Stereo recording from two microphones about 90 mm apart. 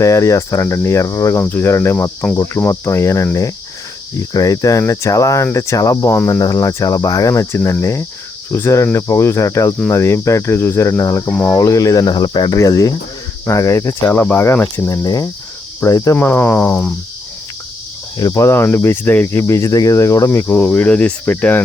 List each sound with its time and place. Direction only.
0.0 s cricket: 35° left (ahead or behind)
4.2 s cricket: 45° left (ahead or behind)
6.1 s speech: 25° left (ahead or behind)
6.4 s cricket: 40° left (ahead or behind)
12.5 s cricket: 40° left (ahead or behind)
14.2 s speech: 25° left (ahead or behind)
14.8 s cricket: 40° left (ahead or behind)
16.1 s speech: 25° left (ahead or behind)
18.2 s cricket: 45° left (ahead or behind)
18.4 s speech: 25° left (ahead or behind)
20.5 s speech: 15° left (ahead or behind)